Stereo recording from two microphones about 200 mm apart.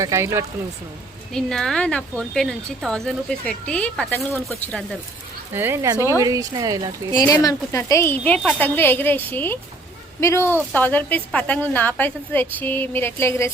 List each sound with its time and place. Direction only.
0.0 s speech: 15° right (ahead or behind)
1.3 s a woman's voice: 5° left (ahead or behind)
5.5 s speech: 10° right (ahead or behind)
7.3 s a woman's voice: 15° left (ahead or behind)